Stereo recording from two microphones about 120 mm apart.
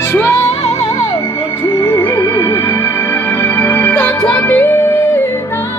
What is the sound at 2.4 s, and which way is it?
Music, 25° left (ahead or behind).